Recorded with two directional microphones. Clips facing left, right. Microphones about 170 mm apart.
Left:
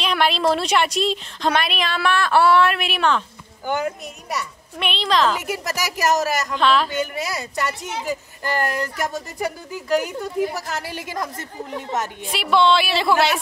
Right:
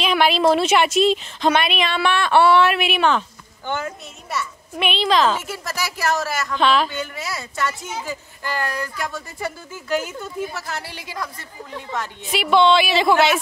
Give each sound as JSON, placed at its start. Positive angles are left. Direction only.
{"t": 0.0, "sound": "a woman's voice", "side_deg": 0}
{"t": 3.6, "sound": "speech", "side_deg": 15}
{"t": 4.7, "sound": "a woman's voice", "side_deg": 0}
{"t": 5.6, "sound": "a woman's voice", "side_deg": 40}
{"t": 6.5, "sound": "a woman's voice", "side_deg": 0}
{"t": 6.9, "sound": "a woman's voice", "side_deg": 40}
{"t": 8.6, "sound": "speech", "side_deg": 20}
{"t": 10.2, "sound": "a woman's voice", "side_deg": 40}
{"t": 12.2, "sound": "a woman's voice", "side_deg": 0}